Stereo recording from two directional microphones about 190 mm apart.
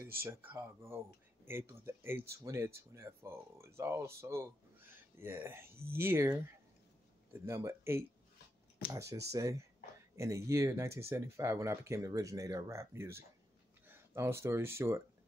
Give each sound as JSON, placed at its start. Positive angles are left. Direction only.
{"t": 0.2, "sound": "speech", "side_deg": -10}
{"t": 7.3, "sound": "speech", "side_deg": -15}
{"t": 9.3, "sound": "speech", "side_deg": -15}